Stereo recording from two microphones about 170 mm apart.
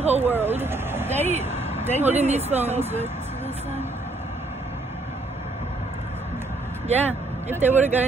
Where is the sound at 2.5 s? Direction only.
10° right (ahead or behind).